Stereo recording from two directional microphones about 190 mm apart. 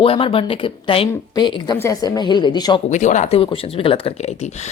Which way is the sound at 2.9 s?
40° left (ahead or behind).